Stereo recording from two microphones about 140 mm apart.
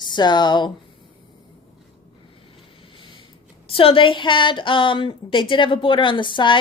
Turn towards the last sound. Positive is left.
turn(degrees=35)  # may be behind; listen again after turning